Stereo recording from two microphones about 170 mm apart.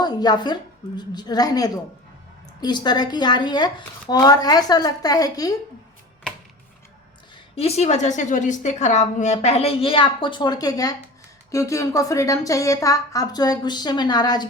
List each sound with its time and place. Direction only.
0.0 s speech: 25° left (ahead or behind)
7.5 s a woman's voice: 40° left (ahead or behind)